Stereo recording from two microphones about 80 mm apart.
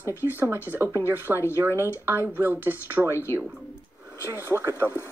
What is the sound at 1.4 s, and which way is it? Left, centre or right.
Speech, left.